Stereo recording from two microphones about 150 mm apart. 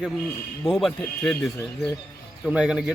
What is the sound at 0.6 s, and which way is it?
Speech, centre (ahead or behind).